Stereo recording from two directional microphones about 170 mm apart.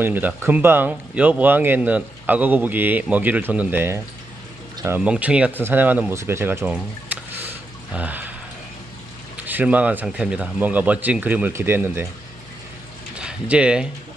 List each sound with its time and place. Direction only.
0.0 s speech: 10° right (ahead or behind)
9.4 s speech: 10° right (ahead or behind)
13.1 s speech: 5° right (ahead or behind)